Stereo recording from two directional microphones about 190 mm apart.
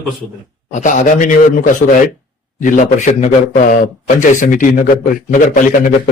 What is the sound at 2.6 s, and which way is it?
A man's voice, 40° left (ahead or behind).